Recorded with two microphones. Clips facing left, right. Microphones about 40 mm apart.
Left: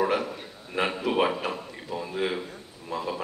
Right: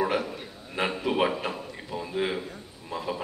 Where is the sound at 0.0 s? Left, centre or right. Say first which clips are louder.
Left 1 dB; centre.